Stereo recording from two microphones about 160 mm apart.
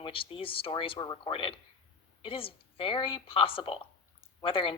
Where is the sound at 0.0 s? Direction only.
35° left (ahead or behind).